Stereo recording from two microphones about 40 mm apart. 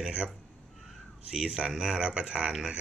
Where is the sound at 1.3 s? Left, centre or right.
Centre.